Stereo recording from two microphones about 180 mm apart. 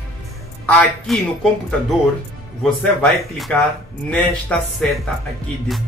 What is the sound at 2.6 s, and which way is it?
A man's voice, 5° left (ahead or behind).